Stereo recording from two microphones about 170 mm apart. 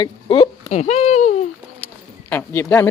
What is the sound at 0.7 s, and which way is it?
Speech, 40° left (ahead or behind).